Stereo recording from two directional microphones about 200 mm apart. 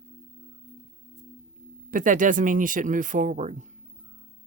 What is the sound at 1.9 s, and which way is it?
Speech, 40° right (ahead or behind).